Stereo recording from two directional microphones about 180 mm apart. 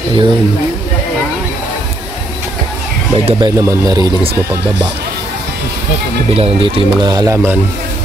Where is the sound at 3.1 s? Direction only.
30° right (ahead or behind).